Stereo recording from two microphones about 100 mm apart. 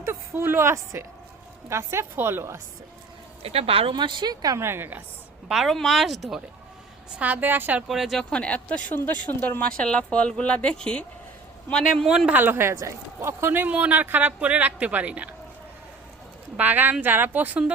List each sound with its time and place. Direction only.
0.0 s a woman's voice: 25° right (ahead or behind)
3.4 s speech: 75° right (ahead or behind)
3.9 s a woman's voice: 50° right (ahead or behind)
4.6 s a woman's voice: 25° right (ahead or behind)
5.5 s speech: centre (ahead or behind)
7.2 s speech: 15° right (ahead or behind)
7.9 s speech: centre (ahead or behind)
8.2 s speech: 10° left (ahead or behind)
12.0 s speech: 5° right (ahead or behind)
12.3 s speech: 20° right (ahead or behind)
16.6 s speech: 20° right (ahead or behind)